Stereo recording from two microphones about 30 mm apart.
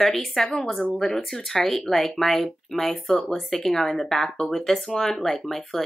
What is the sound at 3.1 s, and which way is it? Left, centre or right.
Speech, left.